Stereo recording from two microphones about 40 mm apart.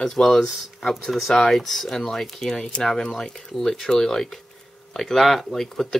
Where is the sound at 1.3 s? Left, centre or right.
Centre.